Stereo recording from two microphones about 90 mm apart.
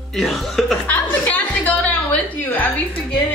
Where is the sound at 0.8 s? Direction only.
20° left (ahead or behind).